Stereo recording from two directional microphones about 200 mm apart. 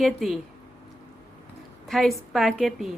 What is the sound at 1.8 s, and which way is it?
A woman's voice, centre (ahead or behind).